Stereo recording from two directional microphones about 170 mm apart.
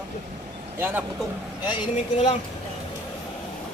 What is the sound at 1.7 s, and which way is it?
Speech, 35° left (ahead or behind).